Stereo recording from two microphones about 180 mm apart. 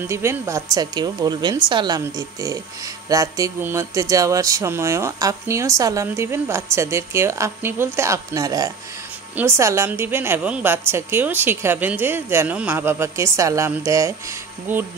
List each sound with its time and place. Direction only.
0.0 s a woman's voice: 15° right (ahead or behind)